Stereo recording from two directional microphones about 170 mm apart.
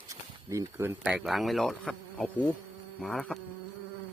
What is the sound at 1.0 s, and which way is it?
Speech, centre (ahead or behind).